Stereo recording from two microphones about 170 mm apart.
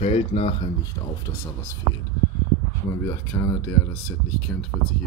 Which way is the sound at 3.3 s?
15° left (ahead or behind).